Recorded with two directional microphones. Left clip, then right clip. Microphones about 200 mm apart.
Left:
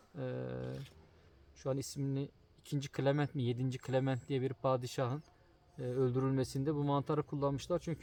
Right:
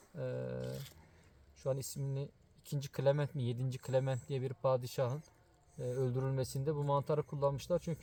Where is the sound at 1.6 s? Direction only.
15° left (ahead or behind).